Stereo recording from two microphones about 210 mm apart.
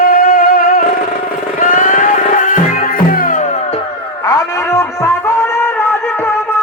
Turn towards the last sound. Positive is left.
turn(degrees=10)  # may be behind; listen again after turning